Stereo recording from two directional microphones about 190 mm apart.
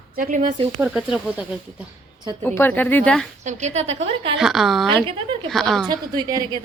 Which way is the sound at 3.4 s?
35° right (ahead or behind).